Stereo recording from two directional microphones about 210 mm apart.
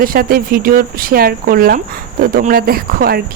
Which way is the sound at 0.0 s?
45° right (ahead or behind).